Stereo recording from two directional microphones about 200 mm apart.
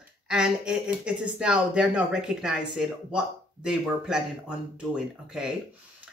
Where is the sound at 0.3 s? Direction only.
5° right (ahead or behind).